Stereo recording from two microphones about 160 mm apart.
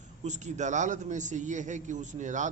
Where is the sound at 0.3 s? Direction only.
45° right (ahead or behind).